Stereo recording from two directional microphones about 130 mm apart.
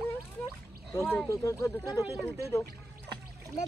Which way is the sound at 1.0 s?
20° left (ahead or behind).